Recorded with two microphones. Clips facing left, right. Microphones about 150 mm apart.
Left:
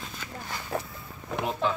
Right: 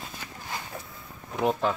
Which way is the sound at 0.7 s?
70° left (ahead or behind).